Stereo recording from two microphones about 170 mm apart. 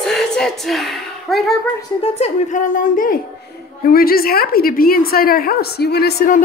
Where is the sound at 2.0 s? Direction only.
40° left (ahead or behind).